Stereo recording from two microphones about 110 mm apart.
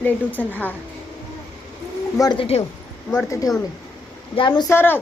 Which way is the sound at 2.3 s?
60° left (ahead or behind).